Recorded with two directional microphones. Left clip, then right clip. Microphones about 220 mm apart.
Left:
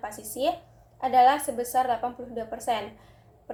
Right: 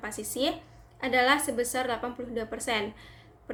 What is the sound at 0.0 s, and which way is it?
A woman's voice, 55° right (ahead or behind).